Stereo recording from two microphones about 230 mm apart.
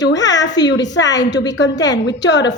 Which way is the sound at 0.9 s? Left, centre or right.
Left.